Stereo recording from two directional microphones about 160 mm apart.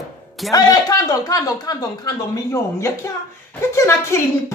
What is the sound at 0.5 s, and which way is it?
Speech, 20° left (ahead or behind).